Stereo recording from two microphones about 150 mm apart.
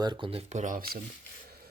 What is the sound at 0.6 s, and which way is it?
Speech, 70° right (ahead or behind).